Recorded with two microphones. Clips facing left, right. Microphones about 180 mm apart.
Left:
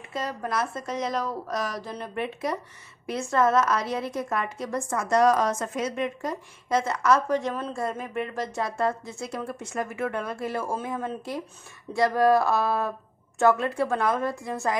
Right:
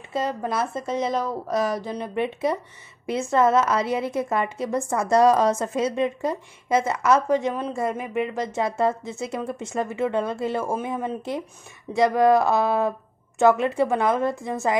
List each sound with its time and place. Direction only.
0.1 s a woman's voice: 25° right (ahead or behind)
6.7 s a woman's voice: 5° right (ahead or behind)
7.5 s a woman's voice: 15° right (ahead or behind)